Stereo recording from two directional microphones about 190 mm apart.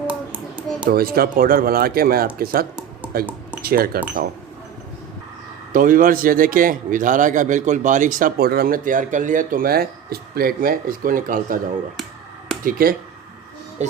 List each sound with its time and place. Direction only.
0.1 s a sound: 5° right (ahead or behind)
0.9 s a man's voice: 50° right (ahead or behind)
5.7 s a man's voice: 45° right (ahead or behind)
12.6 s a man's voice: 50° right (ahead or behind)